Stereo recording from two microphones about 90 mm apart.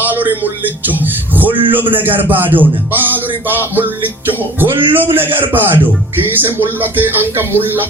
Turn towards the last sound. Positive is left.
turn(degrees=-25)  # may be behind; listen again after turning